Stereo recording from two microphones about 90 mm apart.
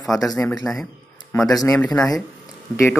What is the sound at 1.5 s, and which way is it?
Speech, 45° left (ahead or behind).